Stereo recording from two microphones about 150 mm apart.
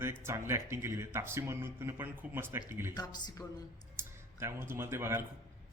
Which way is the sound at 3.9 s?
15° right (ahead or behind).